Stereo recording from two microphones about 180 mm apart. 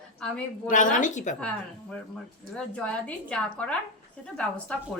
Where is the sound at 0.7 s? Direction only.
45° left (ahead or behind).